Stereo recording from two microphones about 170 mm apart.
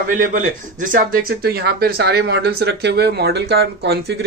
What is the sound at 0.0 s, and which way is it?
Speech, 50° right (ahead or behind).